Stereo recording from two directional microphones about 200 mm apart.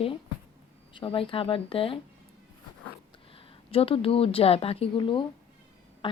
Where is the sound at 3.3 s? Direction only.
30° left (ahead or behind).